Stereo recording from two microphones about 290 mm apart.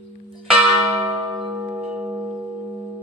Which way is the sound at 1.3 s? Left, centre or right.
Centre.